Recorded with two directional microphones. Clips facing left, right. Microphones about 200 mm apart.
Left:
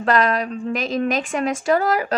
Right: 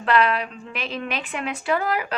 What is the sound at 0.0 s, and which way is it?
A woman's voice, 40° left (ahead or behind).